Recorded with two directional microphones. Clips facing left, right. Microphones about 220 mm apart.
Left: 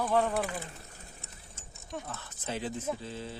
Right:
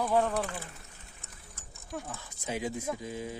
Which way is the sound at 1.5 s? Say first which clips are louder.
Left 1 dB; 25° left (ahead or behind).